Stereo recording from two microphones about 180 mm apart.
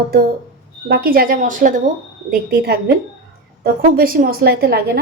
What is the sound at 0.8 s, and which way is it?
A woman's voice, 60° right (ahead or behind).